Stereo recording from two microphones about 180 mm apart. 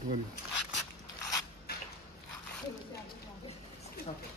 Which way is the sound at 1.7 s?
60° left (ahead or behind).